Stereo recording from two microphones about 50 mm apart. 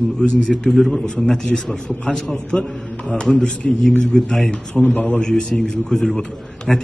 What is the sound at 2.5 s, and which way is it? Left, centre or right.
Speech, centre.